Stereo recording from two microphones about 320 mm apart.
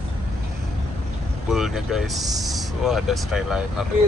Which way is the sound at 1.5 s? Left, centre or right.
Centre.